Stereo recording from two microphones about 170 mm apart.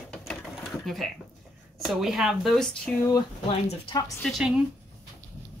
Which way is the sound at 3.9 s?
20° left (ahead or behind).